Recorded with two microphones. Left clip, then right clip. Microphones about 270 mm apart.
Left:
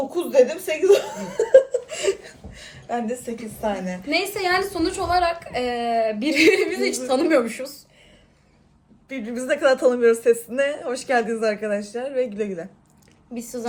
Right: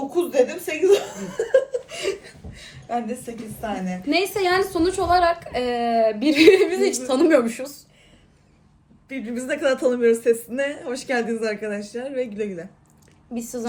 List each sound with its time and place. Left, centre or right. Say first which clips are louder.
0.1 s laughter: left 2 dB; centre
3.6 s a woman's voice: left 3 dB; centre
4.1 s a woman's voice: right 1 dB; centre
9.0 s a woman's voice: left 3 dB; centre
13.3 s a woman's voice: right 1 dB; centre